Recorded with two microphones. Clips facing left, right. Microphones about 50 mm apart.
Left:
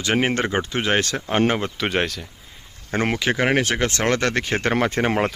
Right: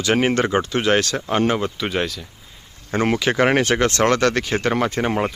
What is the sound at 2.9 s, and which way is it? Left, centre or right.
Speech, centre.